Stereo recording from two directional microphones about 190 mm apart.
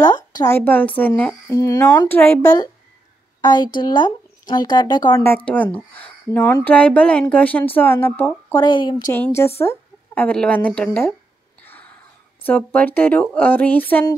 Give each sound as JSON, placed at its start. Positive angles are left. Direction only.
{"t": 0.0, "sound": "speech", "side_deg": 20}
{"t": 11.6, "sound": "a sound", "side_deg": 10}
{"t": 12.4, "sound": "speech", "side_deg": 10}